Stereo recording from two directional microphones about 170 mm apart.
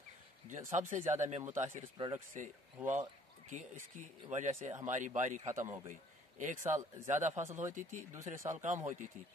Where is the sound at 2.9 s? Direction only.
45° right (ahead or behind).